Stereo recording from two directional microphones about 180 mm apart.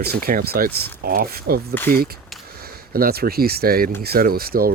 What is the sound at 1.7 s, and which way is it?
Speech, 10° left (ahead or behind).